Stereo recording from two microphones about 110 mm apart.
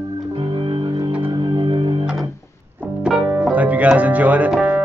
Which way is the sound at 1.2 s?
50° right (ahead or behind).